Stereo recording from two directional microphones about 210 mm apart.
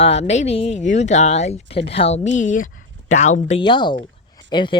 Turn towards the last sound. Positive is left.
turn(degrees=20)  # may be behind; listen again after turning